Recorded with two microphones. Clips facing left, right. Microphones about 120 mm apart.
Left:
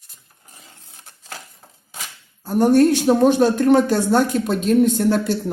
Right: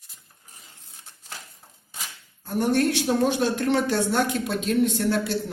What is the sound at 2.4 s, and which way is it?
Speech, 45° left (ahead or behind).